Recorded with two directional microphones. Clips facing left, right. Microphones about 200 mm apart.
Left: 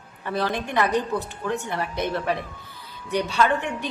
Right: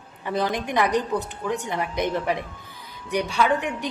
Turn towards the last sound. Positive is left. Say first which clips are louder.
# even
turn(degrees=-10)  # may be behind; listen again after turning